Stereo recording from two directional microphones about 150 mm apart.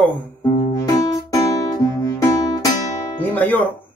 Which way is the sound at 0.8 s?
25° left (ahead or behind).